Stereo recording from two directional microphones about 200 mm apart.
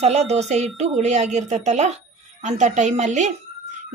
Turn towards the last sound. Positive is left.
turn(degrees=-35)  # may be behind; listen again after turning